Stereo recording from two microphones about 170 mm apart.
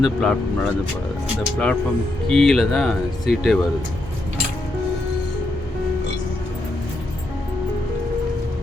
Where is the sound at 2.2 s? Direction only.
5° left (ahead or behind).